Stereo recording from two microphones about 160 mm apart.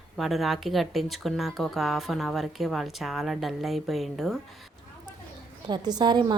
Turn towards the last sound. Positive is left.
turn(degrees=-25)  # may be behind; listen again after turning